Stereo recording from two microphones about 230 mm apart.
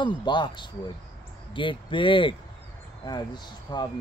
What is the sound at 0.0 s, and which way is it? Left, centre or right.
Speech, centre.